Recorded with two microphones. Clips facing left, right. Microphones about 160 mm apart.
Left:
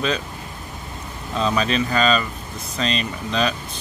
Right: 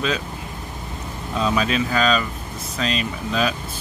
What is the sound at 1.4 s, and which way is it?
Speech, 5° right (ahead or behind).